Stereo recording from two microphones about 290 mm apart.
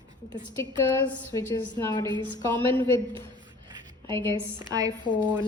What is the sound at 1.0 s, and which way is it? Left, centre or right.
A woman's voice, centre.